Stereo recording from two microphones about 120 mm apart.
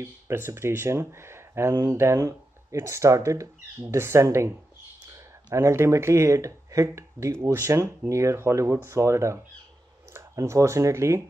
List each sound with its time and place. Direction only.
0.0 s speech: 20° right (ahead or behind)
5.5 s speech: 25° right (ahead or behind)